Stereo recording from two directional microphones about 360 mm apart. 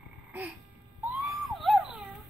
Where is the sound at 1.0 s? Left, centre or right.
Centre.